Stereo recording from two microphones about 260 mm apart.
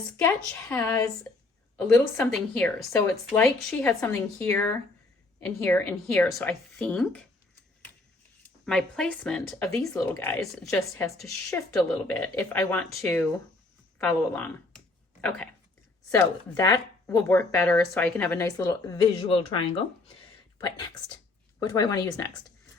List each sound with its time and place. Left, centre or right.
0.7 s speech: centre
2.1 s speech: centre
8.4 s speech: centre
16.1 s speech: centre